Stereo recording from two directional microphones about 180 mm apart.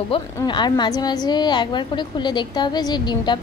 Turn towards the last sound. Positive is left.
turn(degrees=25)  # may be behind; listen again after turning